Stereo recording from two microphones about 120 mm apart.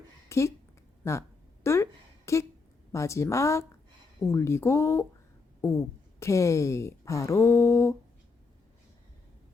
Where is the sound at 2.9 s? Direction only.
25° left (ahead or behind).